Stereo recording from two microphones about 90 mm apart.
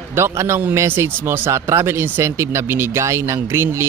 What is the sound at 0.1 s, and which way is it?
A man's voice, 30° right (ahead or behind).